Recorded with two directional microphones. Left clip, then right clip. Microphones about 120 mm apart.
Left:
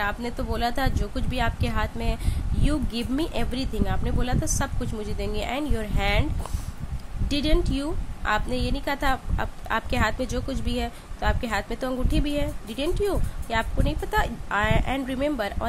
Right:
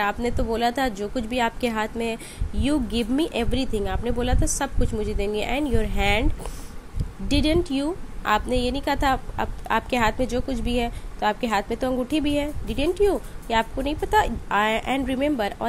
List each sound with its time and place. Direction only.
0.0 s a woman's voice: 20° right (ahead or behind)
7.2 s a woman's voice: 15° right (ahead or behind)